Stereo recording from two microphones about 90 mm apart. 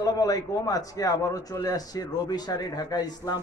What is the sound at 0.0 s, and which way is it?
A man's voice, 45° left (ahead or behind).